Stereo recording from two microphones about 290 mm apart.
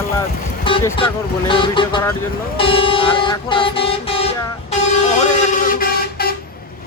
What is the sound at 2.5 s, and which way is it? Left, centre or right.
Vehicle, centre.